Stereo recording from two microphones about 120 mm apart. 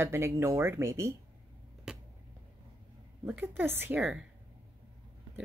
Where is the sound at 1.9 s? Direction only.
5° right (ahead or behind).